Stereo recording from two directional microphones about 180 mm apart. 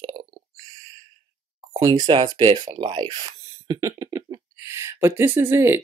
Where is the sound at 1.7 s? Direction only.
20° right (ahead or behind).